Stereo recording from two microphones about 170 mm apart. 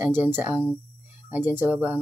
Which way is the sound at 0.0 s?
10° right (ahead or behind).